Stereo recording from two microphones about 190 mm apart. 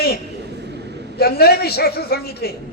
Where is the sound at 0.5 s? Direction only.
60° right (ahead or behind).